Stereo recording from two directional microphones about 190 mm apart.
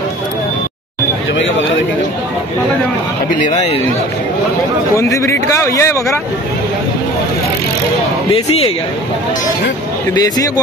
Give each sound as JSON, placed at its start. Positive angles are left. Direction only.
{"t": 3.3, "sound": "a man's voice", "side_deg": 40}
{"t": 4.9, "sound": "a man's voice", "side_deg": 15}
{"t": 8.3, "sound": "speech", "side_deg": 30}
{"t": 10.1, "sound": "speech", "side_deg": 20}